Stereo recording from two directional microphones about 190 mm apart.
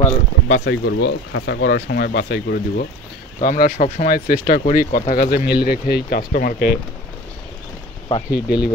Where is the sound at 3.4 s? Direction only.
45° left (ahead or behind).